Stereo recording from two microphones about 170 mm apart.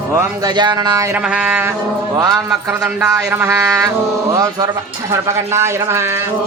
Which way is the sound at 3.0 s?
15° right (ahead or behind).